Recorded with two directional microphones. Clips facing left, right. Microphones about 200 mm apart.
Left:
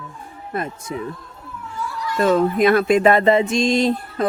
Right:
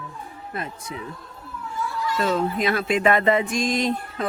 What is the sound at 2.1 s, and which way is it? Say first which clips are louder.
Speech: left 7 dB; 50° left (ahead or behind).